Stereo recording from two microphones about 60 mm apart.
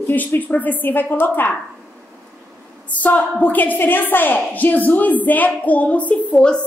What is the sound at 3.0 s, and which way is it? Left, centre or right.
A woman's voice, left.